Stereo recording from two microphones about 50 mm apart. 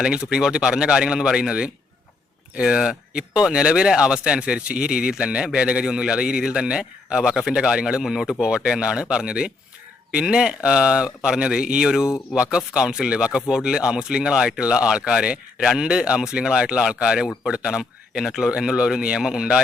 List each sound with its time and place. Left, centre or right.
0.0 s a man's voice: centre
8.0 s a man's voice: centre